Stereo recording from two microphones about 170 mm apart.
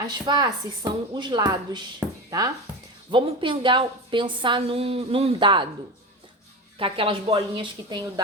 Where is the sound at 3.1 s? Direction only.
30° right (ahead or behind).